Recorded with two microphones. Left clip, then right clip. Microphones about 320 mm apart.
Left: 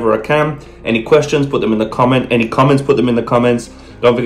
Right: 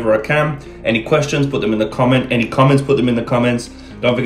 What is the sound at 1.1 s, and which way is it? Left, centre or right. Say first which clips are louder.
Speech: left 8 dB; centre.